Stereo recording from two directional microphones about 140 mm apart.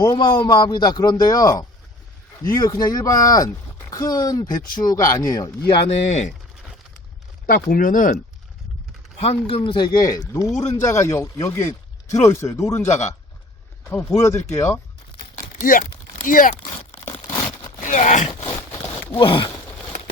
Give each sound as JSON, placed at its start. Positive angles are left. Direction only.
{"t": 0.0, "sound": "a man's voice", "side_deg": 30}
{"t": 5.7, "sound": "speech", "side_deg": 50}
{"t": 7.4, "sound": "speech", "side_deg": 90}
{"t": 9.1, "sound": "a man's voice", "side_deg": 45}
{"t": 12.9, "sound": "speech", "side_deg": 55}
{"t": 14.2, "sound": "speech", "side_deg": 20}
{"t": 15.6, "sound": "speech", "side_deg": 75}
{"t": 17.7, "sound": "speech", "side_deg": 65}
{"t": 19.1, "sound": "a man's voice", "side_deg": 35}